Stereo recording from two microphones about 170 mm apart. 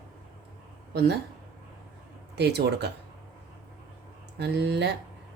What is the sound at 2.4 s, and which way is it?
Speech, 75° right (ahead or behind).